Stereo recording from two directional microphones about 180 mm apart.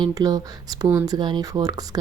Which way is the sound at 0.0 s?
20° right (ahead or behind).